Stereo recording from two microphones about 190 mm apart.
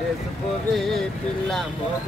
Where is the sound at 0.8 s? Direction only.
Centre (ahead or behind).